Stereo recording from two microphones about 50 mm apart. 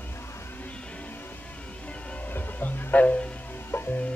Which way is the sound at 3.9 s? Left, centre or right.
Left.